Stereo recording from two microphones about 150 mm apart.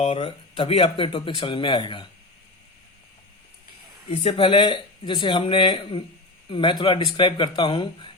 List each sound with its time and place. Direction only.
0.0 s speech: 40° left (ahead or behind)
4.2 s speech: 40° left (ahead or behind)